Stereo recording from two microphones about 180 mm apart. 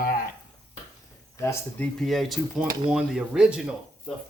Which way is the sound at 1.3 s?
15° left (ahead or behind).